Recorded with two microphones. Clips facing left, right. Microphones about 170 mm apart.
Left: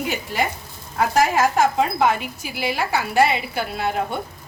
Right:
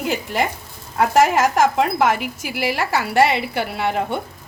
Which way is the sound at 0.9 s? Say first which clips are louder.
Right 3 dB; 75° right (ahead or behind).